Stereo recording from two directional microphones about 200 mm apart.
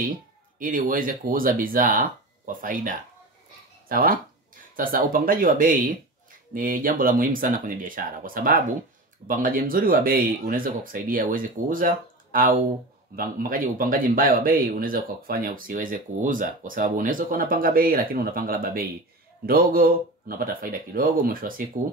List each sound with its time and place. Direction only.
0.6 s speech: 45° right (ahead or behind)